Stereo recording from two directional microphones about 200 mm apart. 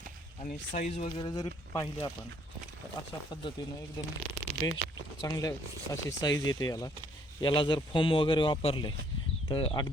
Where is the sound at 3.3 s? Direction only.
20° left (ahead or behind).